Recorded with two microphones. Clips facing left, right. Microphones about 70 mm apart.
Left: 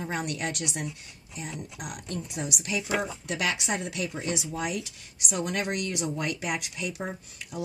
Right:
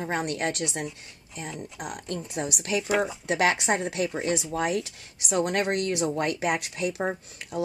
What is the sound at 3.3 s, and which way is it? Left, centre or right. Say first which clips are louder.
A woman's voice: right 7 dB; right.